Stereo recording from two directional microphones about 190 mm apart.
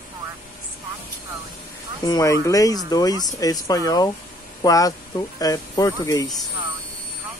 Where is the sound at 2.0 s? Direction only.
20° left (ahead or behind).